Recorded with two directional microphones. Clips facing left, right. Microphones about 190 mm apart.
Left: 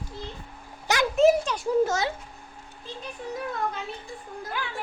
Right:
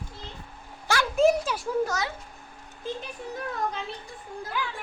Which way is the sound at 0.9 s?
20° left (ahead or behind).